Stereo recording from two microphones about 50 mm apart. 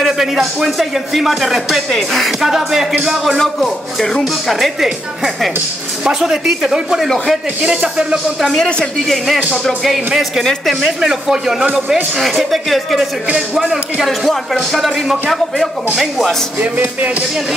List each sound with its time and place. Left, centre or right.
0.0 s speech: centre
3.3 s speech: centre
7.6 s speech: right
8.4 s speech: centre
9.8 s speech: centre
15.9 s speech: centre